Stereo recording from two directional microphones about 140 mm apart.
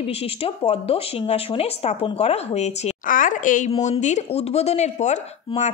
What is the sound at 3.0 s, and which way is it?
A woman's voice, 70° left (ahead or behind).